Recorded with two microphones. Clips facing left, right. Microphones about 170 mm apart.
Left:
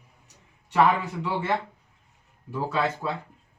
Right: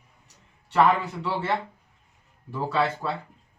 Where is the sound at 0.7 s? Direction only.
10° left (ahead or behind).